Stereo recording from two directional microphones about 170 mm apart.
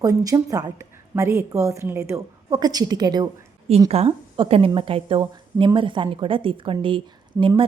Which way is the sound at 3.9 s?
35° right (ahead or behind).